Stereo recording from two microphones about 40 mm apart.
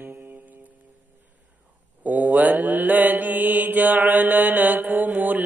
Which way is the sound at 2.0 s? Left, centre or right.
Right.